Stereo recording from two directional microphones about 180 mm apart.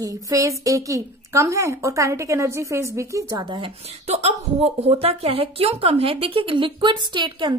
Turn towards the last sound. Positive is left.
turn(degrees=-25)  # may be behind; listen again after turning